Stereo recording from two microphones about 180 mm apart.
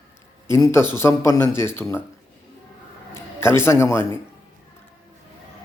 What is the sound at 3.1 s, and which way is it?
A man's voice, 15° left (ahead or behind).